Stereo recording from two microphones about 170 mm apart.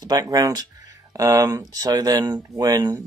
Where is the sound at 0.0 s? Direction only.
20° right (ahead or behind).